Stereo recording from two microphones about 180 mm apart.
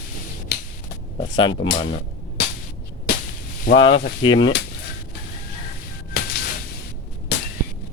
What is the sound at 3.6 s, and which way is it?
Speech, 75° left (ahead or behind).